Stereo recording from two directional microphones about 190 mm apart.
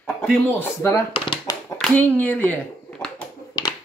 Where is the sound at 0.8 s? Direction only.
20° left (ahead or behind).